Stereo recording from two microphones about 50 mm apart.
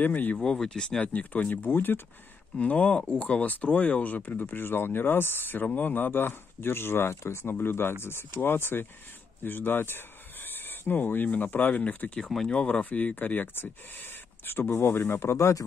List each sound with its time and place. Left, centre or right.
0.0 s speech: left
0.6 s speech: centre
1.0 s speech: left
1.7 s speech: left
2.5 s speech: left
7.6 s speech: left
12.2 s speech: centre
12.9 s speech: left